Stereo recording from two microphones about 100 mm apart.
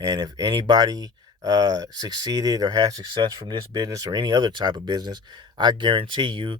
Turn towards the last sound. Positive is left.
turn(degrees=-55)  # may be behind; listen again after turning